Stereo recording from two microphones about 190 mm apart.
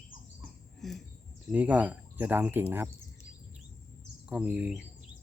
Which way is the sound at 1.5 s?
10° right (ahead or behind).